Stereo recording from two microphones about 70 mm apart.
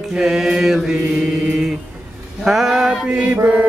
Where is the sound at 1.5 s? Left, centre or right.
Centre.